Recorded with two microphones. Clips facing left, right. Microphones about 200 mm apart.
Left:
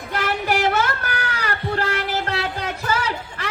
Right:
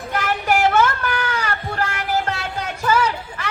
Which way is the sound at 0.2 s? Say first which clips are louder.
Right 2 dB; 40° left (ahead or behind).